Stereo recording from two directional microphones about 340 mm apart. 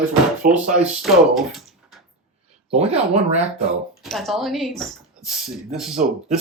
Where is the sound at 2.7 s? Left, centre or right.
Centre.